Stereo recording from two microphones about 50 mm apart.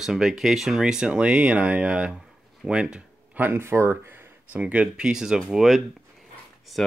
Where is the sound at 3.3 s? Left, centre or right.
Right.